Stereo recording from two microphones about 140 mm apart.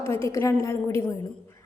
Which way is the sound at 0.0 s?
20° left (ahead or behind).